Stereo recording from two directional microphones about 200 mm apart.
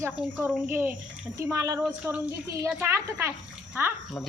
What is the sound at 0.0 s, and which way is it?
A woman's voice, 10° right (ahead or behind).